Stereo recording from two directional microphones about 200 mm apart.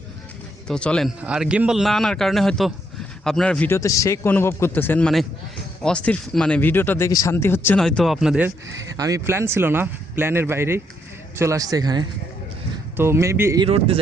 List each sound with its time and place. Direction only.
0.7 s a man's voice: 5° left (ahead or behind); by 13.7 s 15° right (ahead or behind)
13.7 s a man's voice: 30° right (ahead or behind)